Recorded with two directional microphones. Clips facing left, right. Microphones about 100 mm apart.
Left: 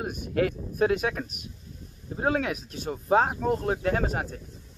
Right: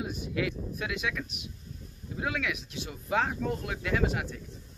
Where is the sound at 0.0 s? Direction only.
50° left (ahead or behind).